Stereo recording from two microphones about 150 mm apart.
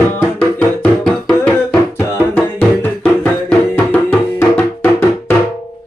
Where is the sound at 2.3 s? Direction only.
10° left (ahead or behind).